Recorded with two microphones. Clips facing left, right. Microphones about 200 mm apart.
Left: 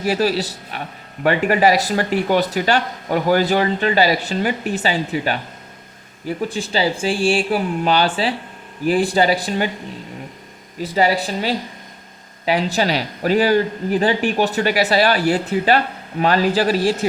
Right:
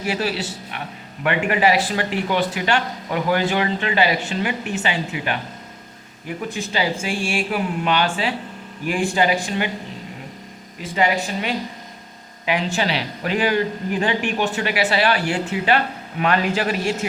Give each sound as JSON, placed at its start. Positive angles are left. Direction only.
{"t": 0.0, "sound": "speech", "side_deg": 40}
{"t": 10.8, "sound": "speech", "side_deg": 35}